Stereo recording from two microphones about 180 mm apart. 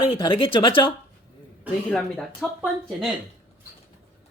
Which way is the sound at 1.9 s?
5° left (ahead or behind).